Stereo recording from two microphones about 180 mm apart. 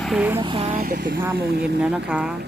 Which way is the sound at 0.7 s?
55° right (ahead or behind).